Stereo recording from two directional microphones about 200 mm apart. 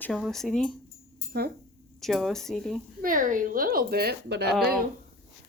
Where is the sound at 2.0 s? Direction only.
Centre (ahead or behind).